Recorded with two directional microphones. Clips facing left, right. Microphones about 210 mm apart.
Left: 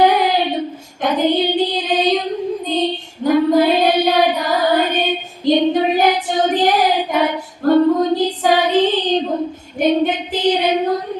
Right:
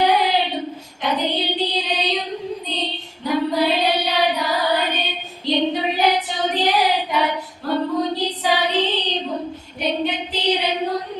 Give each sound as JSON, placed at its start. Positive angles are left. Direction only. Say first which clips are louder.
{"t": 0.0, "sound": "child singing", "louder": "left 4 dB", "side_deg": 50}
{"t": 2.7, "sound": "female singing", "louder": "left 12 dB", "side_deg": 45}
{"t": 3.2, "sound": "child singing", "louder": "left 7 dB", "side_deg": 50}
{"t": 6.2, "sound": "female singing", "louder": "left 6 dB", "side_deg": 50}
{"t": 9.7, "sound": "child singing", "louder": "left 8 dB", "side_deg": 50}